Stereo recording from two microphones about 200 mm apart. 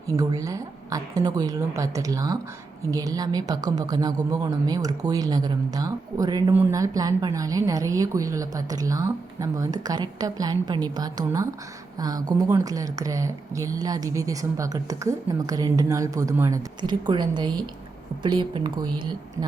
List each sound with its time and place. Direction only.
0.1 s a woman's voice: 15° right (ahead or behind)